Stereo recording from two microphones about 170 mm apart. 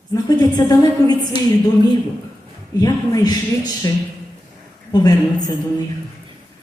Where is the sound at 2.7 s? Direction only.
20° left (ahead or behind).